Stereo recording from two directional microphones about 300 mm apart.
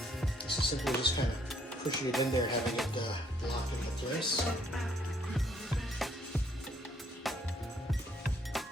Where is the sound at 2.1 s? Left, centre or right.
Centre.